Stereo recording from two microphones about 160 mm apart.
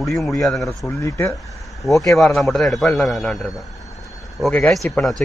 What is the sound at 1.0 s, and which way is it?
Speech, 20° left (ahead or behind).